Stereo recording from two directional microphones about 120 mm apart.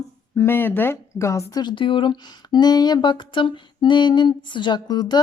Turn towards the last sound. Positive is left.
turn(degrees=35)  # may be behind; listen again after turning